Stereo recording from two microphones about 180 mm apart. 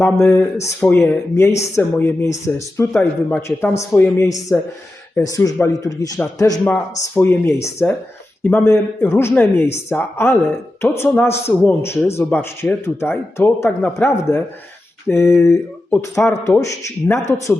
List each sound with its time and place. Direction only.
0.0 s speech: 15° left (ahead or behind)